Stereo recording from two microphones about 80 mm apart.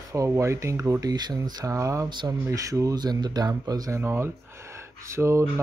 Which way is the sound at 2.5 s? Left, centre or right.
Right.